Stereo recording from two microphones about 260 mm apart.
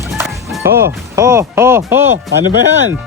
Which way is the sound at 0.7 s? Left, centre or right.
Right.